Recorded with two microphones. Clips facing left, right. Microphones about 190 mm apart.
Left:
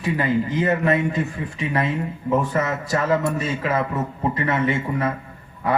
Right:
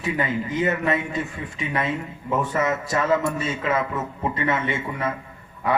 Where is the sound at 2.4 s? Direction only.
35° left (ahead or behind).